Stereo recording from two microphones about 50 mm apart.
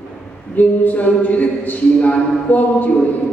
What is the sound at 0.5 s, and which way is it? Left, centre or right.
Speech, left.